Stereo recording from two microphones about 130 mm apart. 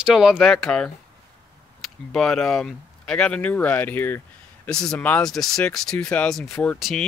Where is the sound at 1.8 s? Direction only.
Centre (ahead or behind).